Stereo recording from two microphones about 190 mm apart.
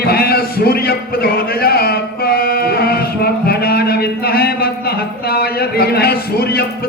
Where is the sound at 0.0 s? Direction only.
55° left (ahead or behind).